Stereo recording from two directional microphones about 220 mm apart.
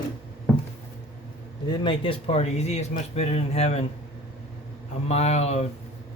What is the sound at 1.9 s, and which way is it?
Speech, 25° left (ahead or behind).